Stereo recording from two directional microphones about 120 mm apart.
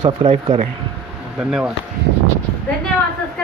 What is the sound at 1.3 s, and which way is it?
Speech, 10° right (ahead or behind).